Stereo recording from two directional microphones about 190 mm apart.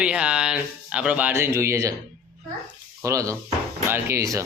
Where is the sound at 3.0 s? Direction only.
15° right (ahead or behind).